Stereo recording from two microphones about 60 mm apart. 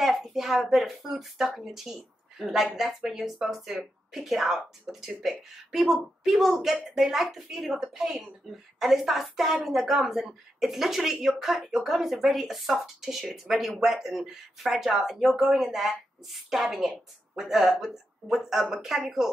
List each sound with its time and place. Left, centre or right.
0.0 s speech: centre